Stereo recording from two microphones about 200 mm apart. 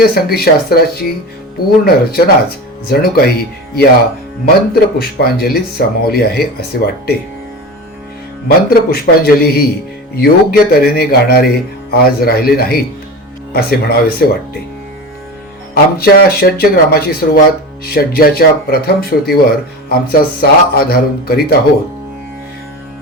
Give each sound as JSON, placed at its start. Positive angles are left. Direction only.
{"t": 0.0, "sound": "speech", "side_deg": 50}
{"t": 4.4, "sound": "speech", "side_deg": 50}
{"t": 8.4, "sound": "speech", "side_deg": 50}
{"t": 15.7, "sound": "speech", "side_deg": 50}